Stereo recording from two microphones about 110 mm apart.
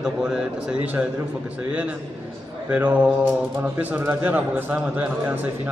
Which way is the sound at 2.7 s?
15° right (ahead or behind).